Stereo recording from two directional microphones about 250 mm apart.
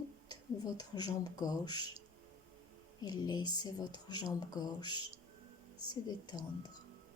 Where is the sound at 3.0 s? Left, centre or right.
Centre.